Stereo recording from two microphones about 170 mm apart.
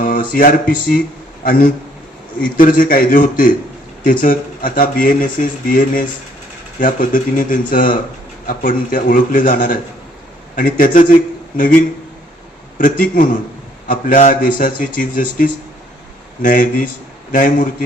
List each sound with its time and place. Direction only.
0.0 s a sound: 55° left (ahead or behind)
0.7 s a man's voice: 55° left (ahead or behind)
12.8 s speech: 50° left (ahead or behind)